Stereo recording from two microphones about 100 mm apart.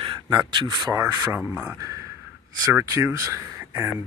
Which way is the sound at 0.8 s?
35° right (ahead or behind).